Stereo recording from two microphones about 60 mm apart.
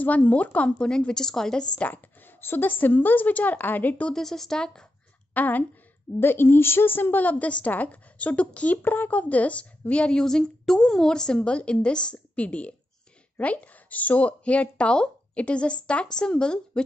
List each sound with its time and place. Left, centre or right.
0.0 s speech: left; by 1.7 s centre
1.8 s a woman's voice: left
4.1 s speech: centre
5.3 s speech: left
6.1 s speech: left
8.8 s speech: left; by 16.8 s centre